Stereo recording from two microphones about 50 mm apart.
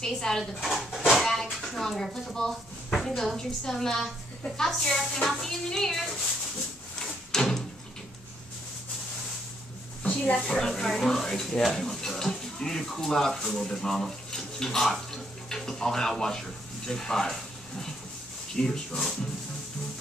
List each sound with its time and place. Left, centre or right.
0.0 s speech: centre
0.6 s speech: centre
1.2 s a sound: centre
2.2 s speech: centre
7.0 s drawer open or close: centre
10.0 s a sound: left
10.5 s speech: centre